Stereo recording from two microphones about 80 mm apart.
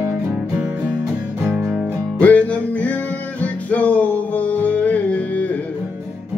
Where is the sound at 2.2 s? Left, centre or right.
Centre.